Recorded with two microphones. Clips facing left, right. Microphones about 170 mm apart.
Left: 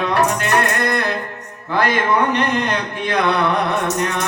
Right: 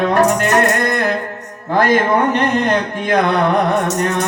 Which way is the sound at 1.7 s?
45° right (ahead or behind).